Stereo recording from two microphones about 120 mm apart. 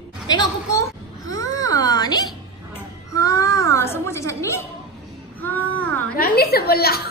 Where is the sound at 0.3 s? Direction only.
30° left (ahead or behind).